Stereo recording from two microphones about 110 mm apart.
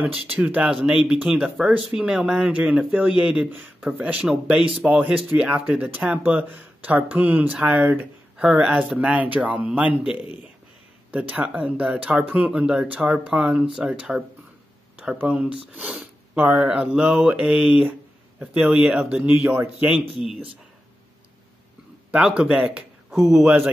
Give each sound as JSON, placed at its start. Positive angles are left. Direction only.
{"t": 0.0, "sound": "speech", "side_deg": -15}
{"t": 19.9, "sound": "speech", "side_deg": -5}
{"t": 22.1, "sound": "speech", "side_deg": -10}